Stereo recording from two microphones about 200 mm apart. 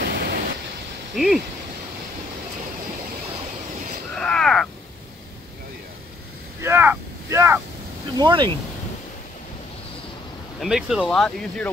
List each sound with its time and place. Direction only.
0.0 s waves: 50° right (ahead or behind)
1.1 s speech: centre (ahead or behind)
4.1 s crow: 5° left (ahead or behind)
6.6 s vehicle: 10° right (ahead or behind)
8.2 s speech: 20° right (ahead or behind)
10.6 s speech: centre (ahead or behind)